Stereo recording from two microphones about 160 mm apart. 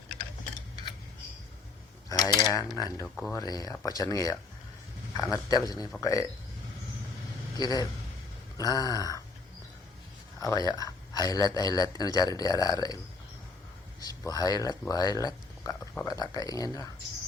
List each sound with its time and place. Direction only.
2.0 s mechanisms: 25° left (ahead or behind)
2.7 s speech: 25° left (ahead or behind)
7.5 s a man's voice: 25° left (ahead or behind)
10.4 s speech: 25° left (ahead or behind)
14.0 s speech: 25° left (ahead or behind)